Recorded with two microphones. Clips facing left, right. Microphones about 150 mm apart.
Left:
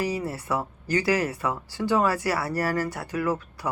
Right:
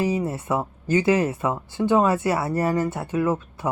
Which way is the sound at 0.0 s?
20° right (ahead or behind).